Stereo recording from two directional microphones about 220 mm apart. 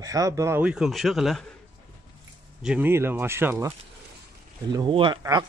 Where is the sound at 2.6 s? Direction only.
5° right (ahead or behind).